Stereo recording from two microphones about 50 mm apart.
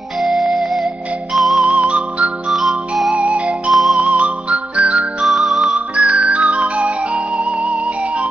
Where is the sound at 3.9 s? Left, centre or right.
Right.